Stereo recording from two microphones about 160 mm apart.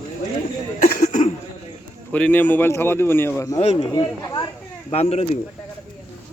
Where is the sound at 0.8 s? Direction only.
55° left (ahead or behind).